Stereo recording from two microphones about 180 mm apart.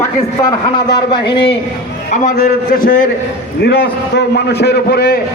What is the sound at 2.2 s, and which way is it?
Speech, 55° left (ahead or behind).